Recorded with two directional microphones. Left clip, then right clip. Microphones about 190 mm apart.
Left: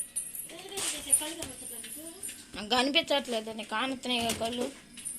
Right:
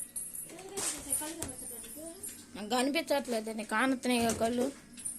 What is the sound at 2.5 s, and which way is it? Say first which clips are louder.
Speech: left 5 dB; 10° right (ahead or behind).